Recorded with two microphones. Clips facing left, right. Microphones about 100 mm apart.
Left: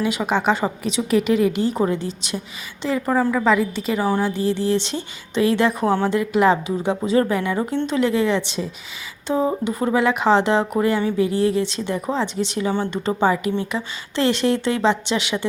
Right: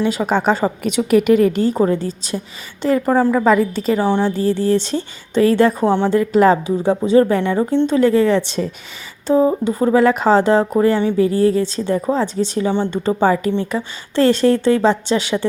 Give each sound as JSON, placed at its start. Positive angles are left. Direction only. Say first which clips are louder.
{"t": 0.0, "sound": "speech", "louder": "right 3 dB", "side_deg": -35}
{"t": 0.8, "sound": "a woman's voice", "louder": "right 5 dB", "side_deg": -60}
{"t": 3.3, "sound": "a woman's voice", "louder": "right 4 dB", "side_deg": -5}
{"t": 3.6, "sound": "speech", "louder": "right 5 dB", "side_deg": -40}
{"t": 4.0, "sound": "a woman's voice", "louder": "right 2 dB", "side_deg": -25}
{"t": 4.4, "sound": "speech", "louder": "right 4 dB", "side_deg": -45}
{"t": 5.8, "sound": "a woman's voice", "louder": "right 4 dB", "side_deg": -25}
{"t": 6.1, "sound": "speech", "louder": "right 6 dB", "side_deg": -35}
{"t": 8.4, "sound": "a woman's voice", "louder": "right 5 dB", "side_deg": -50}
{"t": 9.2, "sound": "speech", "louder": "right 6 dB", "side_deg": -30}
{"t": 13.2, "sound": "speech", "louder": "right 3 dB", "side_deg": -35}